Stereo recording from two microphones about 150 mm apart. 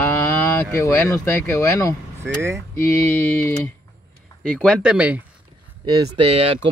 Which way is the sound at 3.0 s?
15° left (ahead or behind).